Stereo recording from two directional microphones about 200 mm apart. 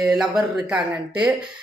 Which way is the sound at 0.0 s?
Centre (ahead or behind).